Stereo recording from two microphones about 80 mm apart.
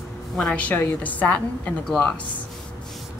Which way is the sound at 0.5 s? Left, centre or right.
Left.